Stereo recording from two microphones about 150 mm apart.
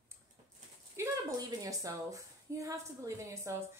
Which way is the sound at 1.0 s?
20° right (ahead or behind).